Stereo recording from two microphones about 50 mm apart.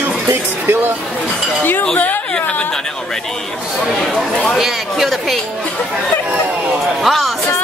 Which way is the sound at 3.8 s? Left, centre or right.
Centre.